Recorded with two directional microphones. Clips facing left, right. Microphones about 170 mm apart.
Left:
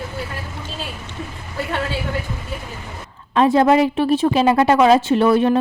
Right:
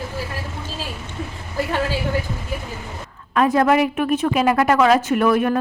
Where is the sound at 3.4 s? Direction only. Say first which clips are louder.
Left 2 dB; 25° left (ahead or behind).